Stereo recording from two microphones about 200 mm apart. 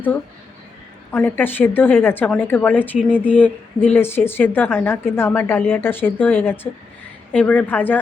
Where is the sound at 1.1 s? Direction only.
10° left (ahead or behind).